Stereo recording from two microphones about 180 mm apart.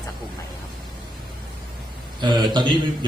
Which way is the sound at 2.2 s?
25° right (ahead or behind).